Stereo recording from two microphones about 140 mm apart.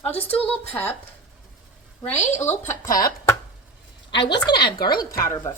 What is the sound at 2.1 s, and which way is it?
Speech, 55° left (ahead or behind).